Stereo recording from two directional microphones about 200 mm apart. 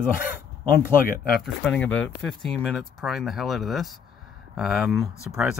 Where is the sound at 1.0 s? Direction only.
45° left (ahead or behind).